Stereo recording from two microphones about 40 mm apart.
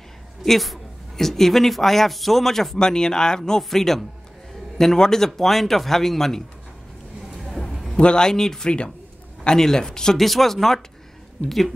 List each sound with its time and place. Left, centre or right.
0.5 s speech: centre
7.3 s a sound: centre
7.9 s a man's voice: centre
10.1 s speech: centre